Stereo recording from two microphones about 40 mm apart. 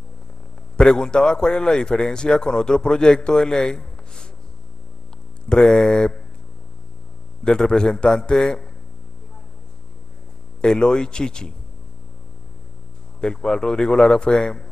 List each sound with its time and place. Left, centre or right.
0.7 s a man's voice: centre
5.5 s a man's voice: centre
7.4 s a man's voice: centre
10.6 s a man's voice: left
13.2 s a man's voice: centre